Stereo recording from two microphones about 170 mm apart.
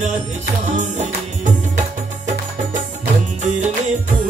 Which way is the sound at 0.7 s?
45° right (ahead or behind).